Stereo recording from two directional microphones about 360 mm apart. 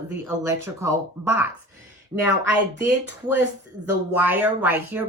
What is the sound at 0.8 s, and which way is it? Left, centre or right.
A woman's voice, centre.